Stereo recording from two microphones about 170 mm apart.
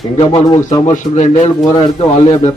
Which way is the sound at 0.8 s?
40° left (ahead or behind).